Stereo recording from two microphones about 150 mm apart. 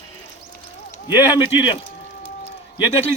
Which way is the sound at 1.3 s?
30° left (ahead or behind).